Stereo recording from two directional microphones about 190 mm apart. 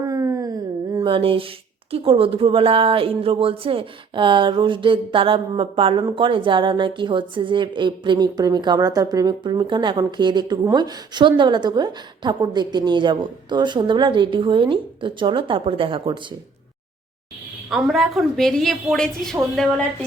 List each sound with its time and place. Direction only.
0.0 s speech: 15° right (ahead or behind)
17.7 s a woman's voice: centre (ahead or behind)